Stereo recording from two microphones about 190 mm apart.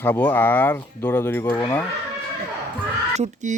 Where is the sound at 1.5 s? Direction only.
20° left (ahead or behind).